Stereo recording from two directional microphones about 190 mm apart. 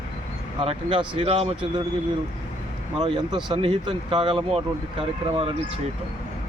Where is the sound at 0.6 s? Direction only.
30° right (ahead or behind).